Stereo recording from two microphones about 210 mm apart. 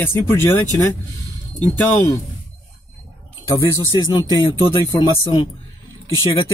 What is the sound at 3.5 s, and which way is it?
Speech, 15° left (ahead or behind).